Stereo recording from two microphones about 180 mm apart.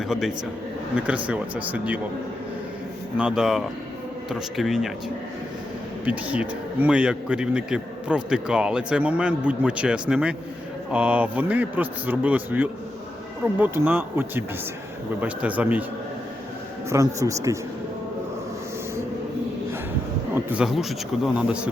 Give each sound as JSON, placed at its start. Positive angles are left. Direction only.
{"t": 0.9, "sound": "a man's voice", "side_deg": -5}
{"t": 3.2, "sound": "a man's voice", "side_deg": -5}
{"t": 6.1, "sound": "a man's voice", "side_deg": -5}
{"t": 17.2, "sound": "a man's voice", "side_deg": -15}
{"t": 20.3, "sound": "a man's voice", "side_deg": -5}